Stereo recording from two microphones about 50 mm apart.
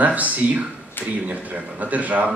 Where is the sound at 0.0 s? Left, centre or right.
Right.